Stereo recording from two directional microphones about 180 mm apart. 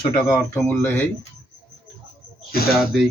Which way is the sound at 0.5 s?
10° left (ahead or behind).